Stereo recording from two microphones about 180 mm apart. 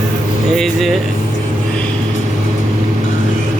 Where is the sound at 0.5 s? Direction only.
Centre (ahead or behind).